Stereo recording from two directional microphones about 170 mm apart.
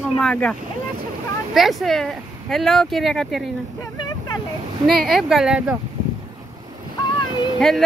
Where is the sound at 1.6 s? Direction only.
Centre (ahead or behind).